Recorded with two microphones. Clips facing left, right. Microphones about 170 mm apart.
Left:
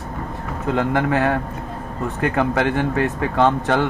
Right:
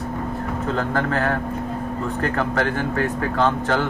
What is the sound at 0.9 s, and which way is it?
Speech, 15° left (ahead or behind).